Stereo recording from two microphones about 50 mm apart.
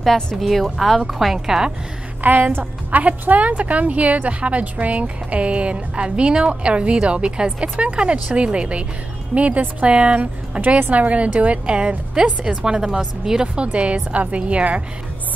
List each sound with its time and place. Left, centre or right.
0.4 s a woman's voice: centre
2.2 s a woman's voice: right